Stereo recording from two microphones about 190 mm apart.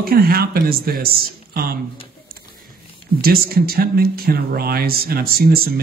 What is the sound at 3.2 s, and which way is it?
Speech, 50° right (ahead or behind).